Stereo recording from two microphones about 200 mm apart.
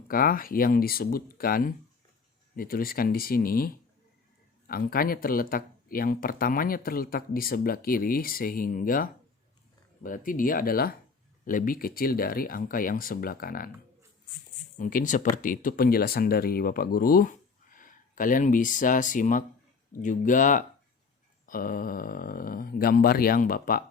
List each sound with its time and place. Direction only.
0.1 s speech: 45° left (ahead or behind)
14.8 s speech: 40° left (ahead or behind)